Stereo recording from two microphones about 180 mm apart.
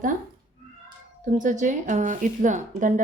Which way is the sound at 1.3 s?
45° right (ahead or behind).